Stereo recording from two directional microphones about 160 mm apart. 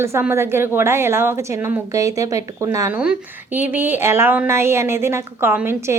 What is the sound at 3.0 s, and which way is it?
A woman's voice, 10° right (ahead or behind).